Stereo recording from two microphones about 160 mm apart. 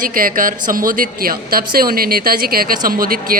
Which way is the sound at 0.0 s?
60° right (ahead or behind).